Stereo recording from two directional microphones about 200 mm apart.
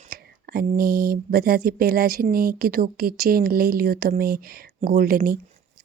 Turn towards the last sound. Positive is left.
turn(degrees=-45)  # may be behind; listen again after turning